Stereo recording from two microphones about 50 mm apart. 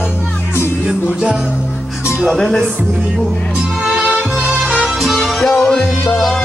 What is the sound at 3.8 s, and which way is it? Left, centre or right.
Music, right.